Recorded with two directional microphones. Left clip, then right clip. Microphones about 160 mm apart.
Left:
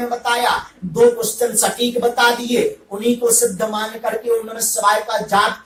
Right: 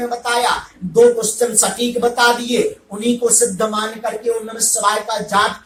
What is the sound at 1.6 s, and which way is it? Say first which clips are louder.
Speech: even; 25° right (ahead or behind).